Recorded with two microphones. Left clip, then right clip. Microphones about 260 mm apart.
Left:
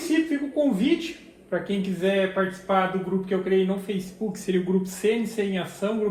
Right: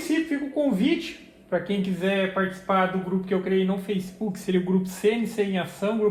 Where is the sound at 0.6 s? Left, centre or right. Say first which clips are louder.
Left 1 dB; right.